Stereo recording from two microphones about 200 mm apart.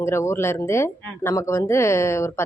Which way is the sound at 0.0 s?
15° left (ahead or behind).